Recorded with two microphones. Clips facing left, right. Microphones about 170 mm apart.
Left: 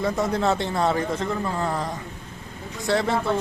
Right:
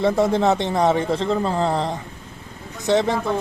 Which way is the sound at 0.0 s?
25° right (ahead or behind).